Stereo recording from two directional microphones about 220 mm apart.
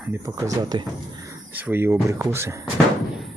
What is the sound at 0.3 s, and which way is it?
Speech, 15° right (ahead or behind).